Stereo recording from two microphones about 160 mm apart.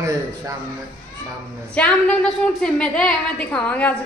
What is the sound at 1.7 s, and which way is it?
A woman's voice, 5° left (ahead or behind).